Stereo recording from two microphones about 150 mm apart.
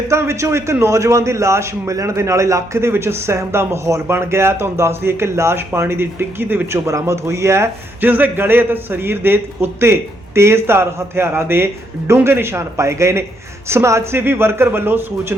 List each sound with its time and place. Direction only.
0.1 s a man's voice: 20° right (ahead or behind)